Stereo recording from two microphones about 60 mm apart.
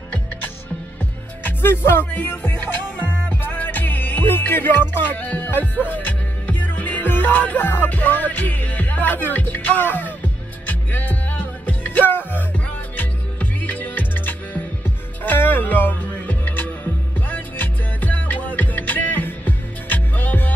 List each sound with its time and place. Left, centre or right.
1.4 s music: left